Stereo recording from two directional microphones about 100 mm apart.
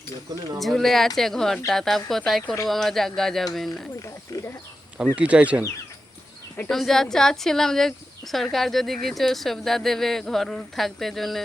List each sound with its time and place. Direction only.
0.6 s speech: centre (ahead or behind)
4.0 s speech: 30° left (ahead or behind)
5.0 s speech: 15° right (ahead or behind)
6.7 s speech: 5° left (ahead or behind)